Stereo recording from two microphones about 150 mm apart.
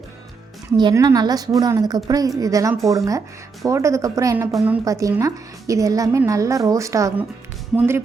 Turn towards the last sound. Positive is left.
turn(degrees=-5)  # may be behind; listen again after turning